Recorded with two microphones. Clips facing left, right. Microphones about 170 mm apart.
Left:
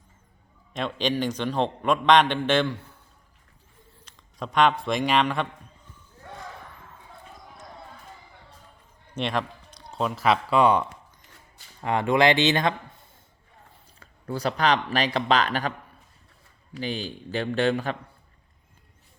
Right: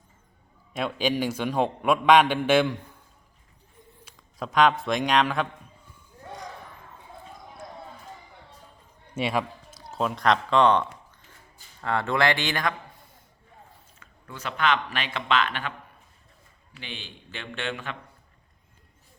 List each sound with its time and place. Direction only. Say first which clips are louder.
0.7 s a man's voice: even; 5° right (ahead or behind)
4.0 s a man's voice: even; 5° right (ahead or behind)
9.1 s speech: right 1 dB; 5° right (ahead or behind); by 12.7 s 25° left (ahead or behind)
14.0 s speech: left 9 dB; 35° left (ahead or behind)
16.7 s speech: left 11 dB; 40° left (ahead or behind)